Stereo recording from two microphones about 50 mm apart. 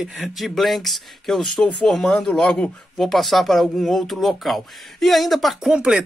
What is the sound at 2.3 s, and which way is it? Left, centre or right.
Speech, left.